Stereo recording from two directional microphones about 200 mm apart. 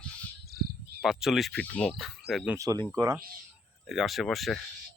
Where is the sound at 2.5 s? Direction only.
20° right (ahead or behind).